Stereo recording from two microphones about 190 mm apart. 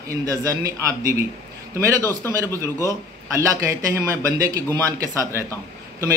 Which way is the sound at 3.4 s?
15° right (ahead or behind).